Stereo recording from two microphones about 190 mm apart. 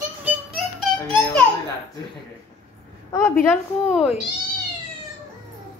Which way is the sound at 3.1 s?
15° left (ahead or behind).